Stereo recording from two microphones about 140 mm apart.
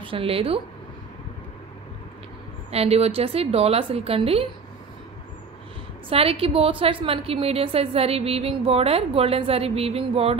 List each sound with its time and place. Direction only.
0.0 s speech: 40° right (ahead or behind)
2.7 s a woman's voice: 45° right (ahead or behind)
6.0 s a woman's voice: 40° right (ahead or behind)